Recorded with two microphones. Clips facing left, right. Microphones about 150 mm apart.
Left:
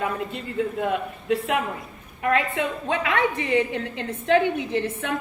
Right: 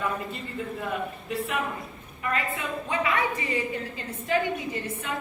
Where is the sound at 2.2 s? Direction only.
70° left (ahead or behind).